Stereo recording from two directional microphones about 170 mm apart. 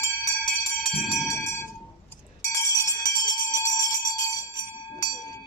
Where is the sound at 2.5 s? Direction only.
20° left (ahead or behind).